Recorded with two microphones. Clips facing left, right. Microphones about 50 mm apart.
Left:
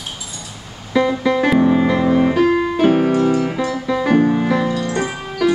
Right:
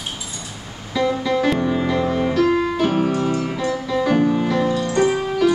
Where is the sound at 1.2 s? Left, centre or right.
Centre.